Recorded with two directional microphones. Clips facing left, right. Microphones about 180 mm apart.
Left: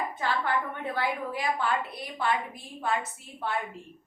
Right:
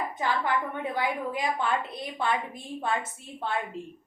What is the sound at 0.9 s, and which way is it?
A woman's voice, 15° right (ahead or behind).